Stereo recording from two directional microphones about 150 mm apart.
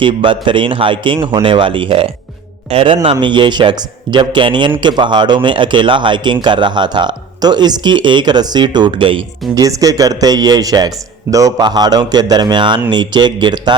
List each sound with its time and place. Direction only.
0.0 s speech: 35° right (ahead or behind)
9.6 s a man's voice: 25° right (ahead or behind)